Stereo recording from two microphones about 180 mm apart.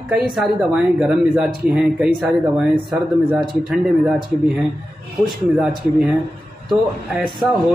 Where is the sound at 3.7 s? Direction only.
5° right (ahead or behind).